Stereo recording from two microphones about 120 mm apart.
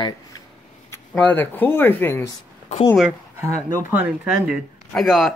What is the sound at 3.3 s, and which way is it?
Speech, 20° right (ahead or behind).